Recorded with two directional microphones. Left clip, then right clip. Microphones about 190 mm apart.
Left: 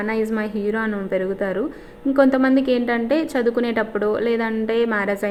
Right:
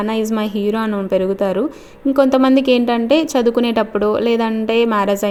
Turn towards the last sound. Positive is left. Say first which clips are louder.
# right 5 dB
turn(degrees=-45)  # may be behind; listen again after turning